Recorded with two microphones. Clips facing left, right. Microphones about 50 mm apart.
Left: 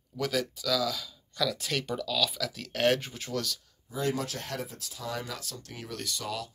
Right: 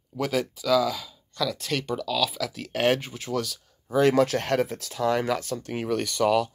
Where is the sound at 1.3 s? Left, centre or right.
Centre.